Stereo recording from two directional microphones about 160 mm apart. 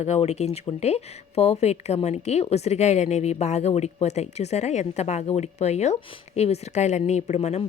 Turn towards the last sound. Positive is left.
turn(degrees=45)  # may be behind; listen again after turning